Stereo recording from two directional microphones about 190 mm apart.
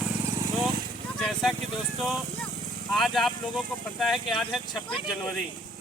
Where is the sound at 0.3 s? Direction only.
15° right (ahead or behind).